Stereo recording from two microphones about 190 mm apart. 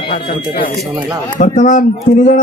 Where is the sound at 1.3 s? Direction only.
40° left (ahead or behind).